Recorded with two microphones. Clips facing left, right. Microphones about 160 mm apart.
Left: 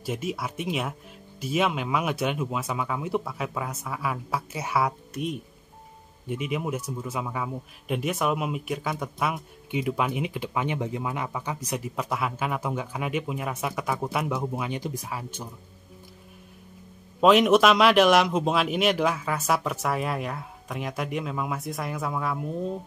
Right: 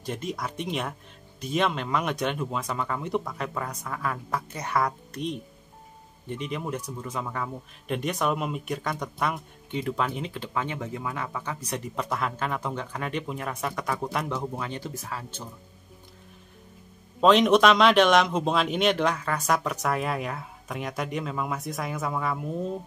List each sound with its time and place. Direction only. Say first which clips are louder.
0.0 s speech: left 2 dB; 5° left (ahead or behind)
17.2 s speech: left 1 dB; 5° left (ahead or behind)